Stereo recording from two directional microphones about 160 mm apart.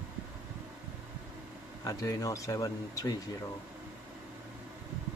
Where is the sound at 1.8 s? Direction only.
20° left (ahead or behind).